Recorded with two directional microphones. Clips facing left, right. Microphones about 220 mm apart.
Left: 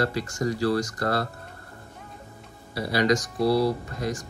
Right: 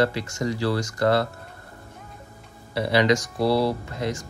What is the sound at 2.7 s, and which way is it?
Speech, 25° right (ahead or behind).